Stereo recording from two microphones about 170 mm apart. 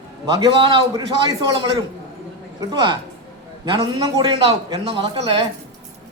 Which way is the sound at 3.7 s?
20° right (ahead or behind).